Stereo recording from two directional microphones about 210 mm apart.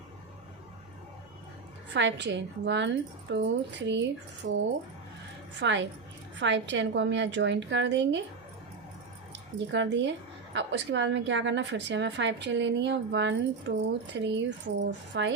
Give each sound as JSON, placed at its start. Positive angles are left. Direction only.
{"t": 1.9, "sound": "a woman's voice", "side_deg": -60}
{"t": 9.6, "sound": "a woman's voice", "side_deg": -55}